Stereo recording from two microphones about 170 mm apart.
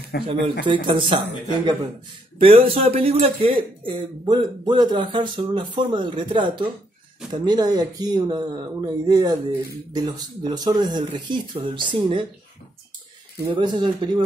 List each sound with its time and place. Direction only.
0.1 s speech: 70° left (ahead or behind)
0.7 s speech: 30° right (ahead or behind)
2.3 s speech: 35° right (ahead or behind)
13.4 s speech: 25° right (ahead or behind)